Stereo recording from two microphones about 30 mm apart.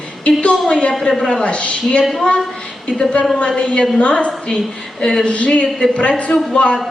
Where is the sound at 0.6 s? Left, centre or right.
Left.